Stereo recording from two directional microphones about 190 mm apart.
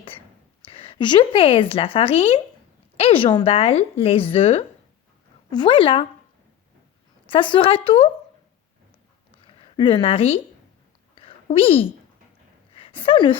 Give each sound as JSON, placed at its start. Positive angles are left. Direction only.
{"t": 0.6, "sound": "a woman's voice", "side_deg": 30}
{"t": 7.3, "sound": "a woman's voice", "side_deg": 25}
{"t": 9.4, "sound": "a woman's voice", "side_deg": 25}
{"t": 11.1, "sound": "a sound", "side_deg": 30}